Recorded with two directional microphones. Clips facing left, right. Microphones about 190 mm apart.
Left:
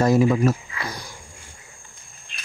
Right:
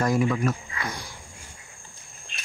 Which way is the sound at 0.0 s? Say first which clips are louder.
Left 6 dB; 25° left (ahead or behind).